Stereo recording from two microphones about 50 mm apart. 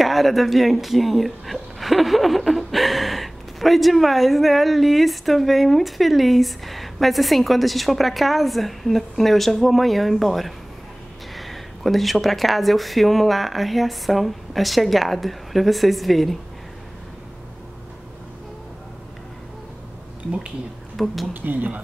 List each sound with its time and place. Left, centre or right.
0.0 s a woman's voice: centre
20.9 s speech: centre
21.3 s speech: right